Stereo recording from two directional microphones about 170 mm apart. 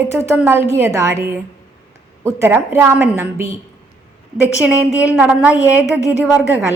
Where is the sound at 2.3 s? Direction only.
15° right (ahead or behind).